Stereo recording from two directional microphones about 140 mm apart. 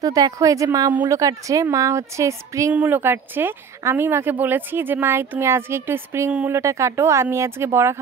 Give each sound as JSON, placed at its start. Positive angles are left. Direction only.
{"t": 0.0, "sound": "a woman's voice", "side_deg": -25}